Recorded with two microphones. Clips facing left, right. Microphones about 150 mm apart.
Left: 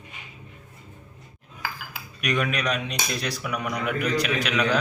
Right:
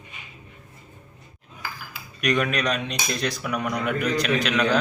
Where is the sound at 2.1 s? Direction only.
5° left (ahead or behind).